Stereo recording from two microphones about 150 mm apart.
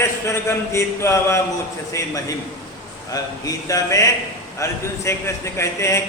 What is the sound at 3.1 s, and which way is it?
A man's voice, 25° left (ahead or behind).